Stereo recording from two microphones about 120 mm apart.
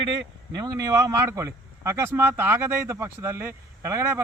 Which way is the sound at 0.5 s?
30° right (ahead or behind).